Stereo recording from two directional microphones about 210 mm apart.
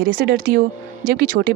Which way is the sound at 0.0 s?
45° right (ahead or behind).